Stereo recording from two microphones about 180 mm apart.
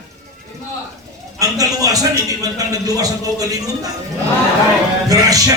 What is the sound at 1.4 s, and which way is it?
A man's voice, 20° right (ahead or behind).